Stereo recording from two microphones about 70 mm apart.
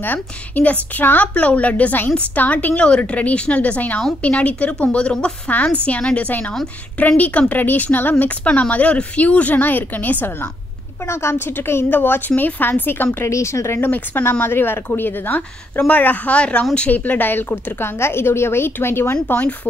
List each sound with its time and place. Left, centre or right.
0.0 s a woman's voice: left
11.1 s a woman's voice: left
13.2 s speech: left
13.7 s a woman's voice: left
19.2 s a woman's voice: centre